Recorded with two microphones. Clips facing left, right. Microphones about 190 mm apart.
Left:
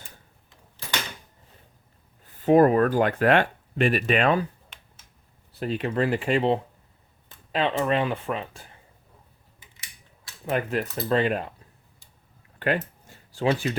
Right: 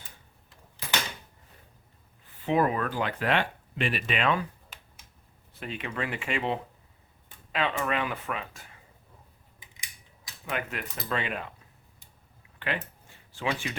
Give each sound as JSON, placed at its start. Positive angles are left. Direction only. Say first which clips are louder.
{"t": 2.4, "sound": "speech", "louder": "left 9 dB", "side_deg": 45}
{"t": 5.5, "sound": "speech", "louder": "left 9 dB", "side_deg": 40}
{"t": 9.7, "sound": "scissors", "louder": "right 2 dB", "side_deg": -15}
{"t": 10.5, "sound": "speech", "louder": "left 8 dB", "side_deg": 35}
{"t": 12.5, "sound": "a sound", "louder": "left 8 dB", "side_deg": 45}